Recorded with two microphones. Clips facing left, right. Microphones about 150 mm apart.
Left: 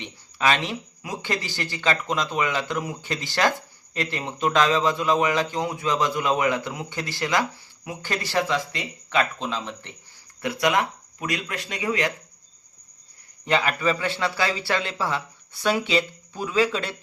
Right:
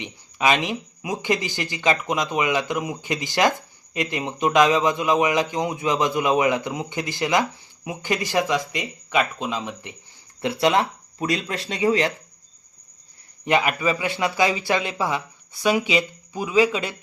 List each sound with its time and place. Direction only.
0.0 s a man's voice: 15° right (ahead or behind)
10.4 s speech: 25° right (ahead or behind)
13.4 s a man's voice: 15° right (ahead or behind)